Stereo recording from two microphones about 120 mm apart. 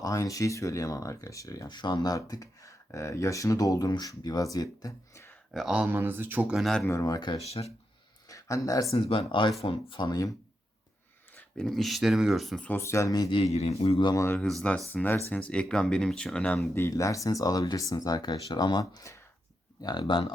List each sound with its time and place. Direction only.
0.0 s speech: 30° left (ahead or behind)
5.5 s speech: 5° right (ahead or behind)
6.6 s speech: 5° left (ahead or behind)
7.0 s speech: 35° left (ahead or behind)
7.3 s a man's voice: 60° left (ahead or behind)
8.3 s a sound: 30° left (ahead or behind)
8.9 s speech: 50° left (ahead or behind); by 10.3 s 30° left (ahead or behind)
11.3 s speech: 5° left (ahead or behind)
12.6 s speech: 20° left (ahead or behind)
13.3 s a man's voice: 60° left (ahead or behind)
14.1 s speech: 25° left (ahead or behind)
14.9 s speech: 15° left (ahead or behind)
16.7 s speech: 25° left (ahead or behind); by 20.2 s 40° left (ahead or behind)